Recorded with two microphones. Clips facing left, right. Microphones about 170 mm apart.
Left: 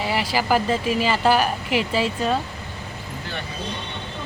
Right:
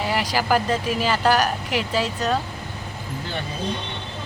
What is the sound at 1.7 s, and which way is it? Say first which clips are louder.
Speech: left 3 dB; 45° right (ahead or behind).